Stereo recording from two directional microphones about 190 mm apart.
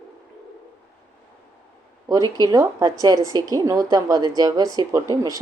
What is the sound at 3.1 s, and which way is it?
Speech, 20° left (ahead or behind).